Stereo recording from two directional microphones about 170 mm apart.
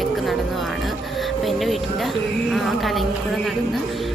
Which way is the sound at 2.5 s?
Centre (ahead or behind).